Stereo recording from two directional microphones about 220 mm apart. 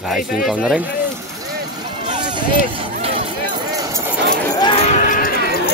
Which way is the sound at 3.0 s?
25° right (ahead or behind).